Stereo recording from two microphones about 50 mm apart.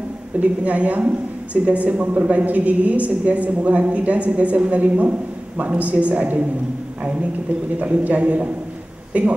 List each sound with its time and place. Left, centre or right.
0.4 s a man's voice: right
7.8 s speech: right